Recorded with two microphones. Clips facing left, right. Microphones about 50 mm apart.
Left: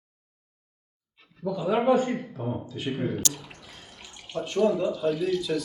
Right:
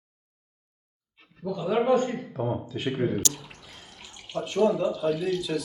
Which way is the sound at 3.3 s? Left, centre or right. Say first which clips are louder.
Left 1 dB; centre.